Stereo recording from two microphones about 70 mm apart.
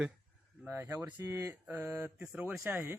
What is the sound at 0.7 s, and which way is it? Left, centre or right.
Speech, right.